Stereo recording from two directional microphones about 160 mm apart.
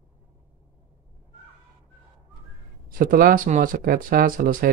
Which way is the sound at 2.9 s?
60° right (ahead or behind).